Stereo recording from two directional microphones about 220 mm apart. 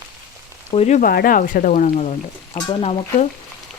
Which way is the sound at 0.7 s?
30° left (ahead or behind).